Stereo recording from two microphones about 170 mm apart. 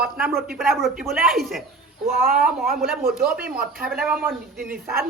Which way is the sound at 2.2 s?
60° right (ahead or behind).